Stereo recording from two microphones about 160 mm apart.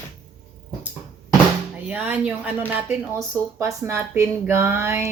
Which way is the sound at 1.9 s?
10° right (ahead or behind).